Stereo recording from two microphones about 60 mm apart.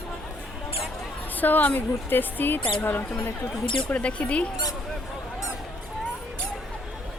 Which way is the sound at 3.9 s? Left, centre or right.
Left.